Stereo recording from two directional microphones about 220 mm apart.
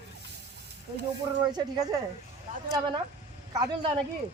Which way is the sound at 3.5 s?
20° right (ahead or behind).